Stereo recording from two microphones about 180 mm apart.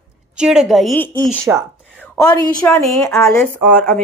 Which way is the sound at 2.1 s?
20° left (ahead or behind).